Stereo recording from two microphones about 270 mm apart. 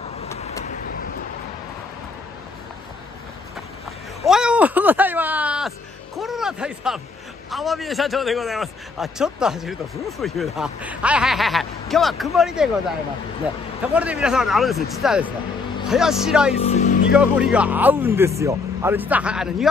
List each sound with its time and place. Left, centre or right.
4.2 s a sound: centre
7.5 s a man's voice: centre
13.9 s a man's voice: centre
16.5 s music: left
17.1 s a man's voice: centre